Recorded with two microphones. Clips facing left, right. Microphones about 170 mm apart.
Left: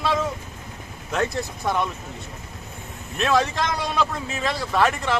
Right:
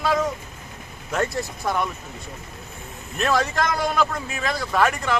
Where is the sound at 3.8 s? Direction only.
Centre (ahead or behind).